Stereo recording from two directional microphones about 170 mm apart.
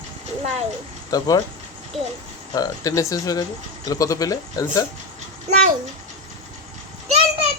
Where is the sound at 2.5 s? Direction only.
20° left (ahead or behind).